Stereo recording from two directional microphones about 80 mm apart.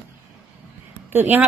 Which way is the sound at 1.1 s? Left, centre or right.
Right.